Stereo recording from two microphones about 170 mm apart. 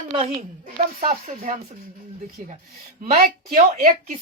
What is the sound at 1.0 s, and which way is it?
A woman's voice, 45° right (ahead or behind).